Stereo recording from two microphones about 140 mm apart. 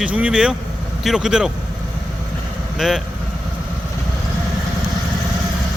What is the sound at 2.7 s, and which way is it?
Speech, centre (ahead or behind).